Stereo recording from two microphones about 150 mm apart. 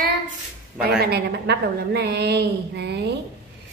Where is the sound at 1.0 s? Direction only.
90° right.